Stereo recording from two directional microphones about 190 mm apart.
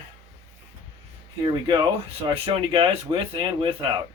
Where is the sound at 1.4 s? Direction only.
25° right (ahead or behind).